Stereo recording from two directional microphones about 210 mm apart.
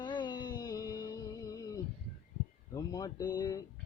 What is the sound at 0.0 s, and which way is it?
Music, 20° left (ahead or behind).